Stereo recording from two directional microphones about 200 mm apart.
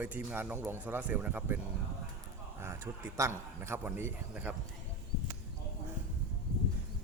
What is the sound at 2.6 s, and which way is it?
A man's voice, 15° right (ahead or behind).